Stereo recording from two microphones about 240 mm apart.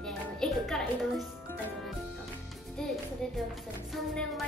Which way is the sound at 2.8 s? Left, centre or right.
Centre.